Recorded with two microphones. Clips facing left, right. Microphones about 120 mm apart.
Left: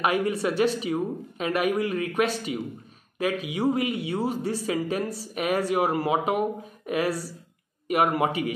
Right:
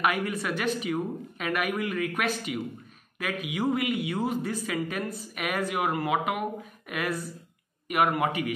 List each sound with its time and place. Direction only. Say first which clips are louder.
0.0 s a woman's voice: left 4 dB; 30° left (ahead or behind)